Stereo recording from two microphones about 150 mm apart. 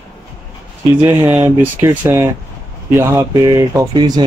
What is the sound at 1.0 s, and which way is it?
Speech, 10° right (ahead or behind).